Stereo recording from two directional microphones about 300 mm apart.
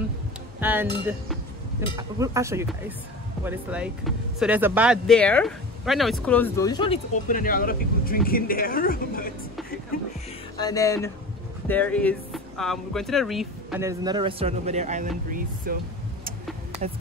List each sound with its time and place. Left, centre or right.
0.6 s speech: centre
2.0 s speech: centre; by 9.3 s left
10.6 s speech: centre; by 15.8 s right